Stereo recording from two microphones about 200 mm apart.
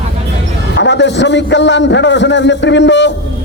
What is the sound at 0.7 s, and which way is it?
A man's voice, 60° left (ahead or behind).